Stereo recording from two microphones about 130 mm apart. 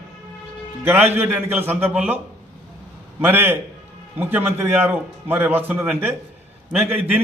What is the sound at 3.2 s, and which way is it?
A man's voice, 15° right (ahead or behind).